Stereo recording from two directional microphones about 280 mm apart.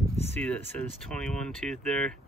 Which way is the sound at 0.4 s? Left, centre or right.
Centre.